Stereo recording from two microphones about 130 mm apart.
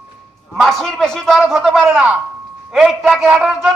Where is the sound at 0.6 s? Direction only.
Centre (ahead or behind).